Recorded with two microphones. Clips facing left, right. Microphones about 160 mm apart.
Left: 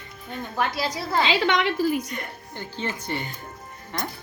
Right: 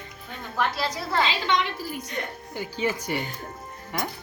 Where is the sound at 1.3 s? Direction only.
80° left.